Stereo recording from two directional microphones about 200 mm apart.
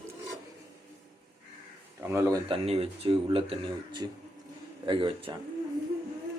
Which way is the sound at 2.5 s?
30° right (ahead or behind).